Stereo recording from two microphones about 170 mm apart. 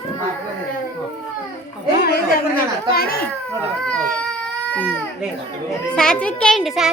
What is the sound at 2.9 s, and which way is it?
Babbling, 60° left (ahead or behind).